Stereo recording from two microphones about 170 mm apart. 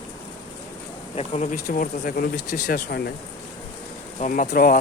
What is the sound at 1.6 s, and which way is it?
Speech, 55° left (ahead or behind).